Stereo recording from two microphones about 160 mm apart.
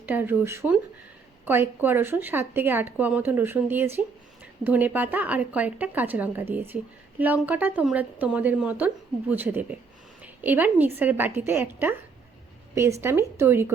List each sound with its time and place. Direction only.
0.0 s a woman's voice: 10° right (ahead or behind)